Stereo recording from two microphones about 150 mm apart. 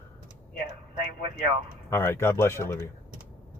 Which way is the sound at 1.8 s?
15° left (ahead or behind).